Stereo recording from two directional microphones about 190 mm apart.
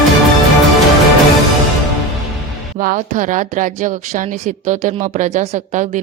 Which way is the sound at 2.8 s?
45° right (ahead or behind).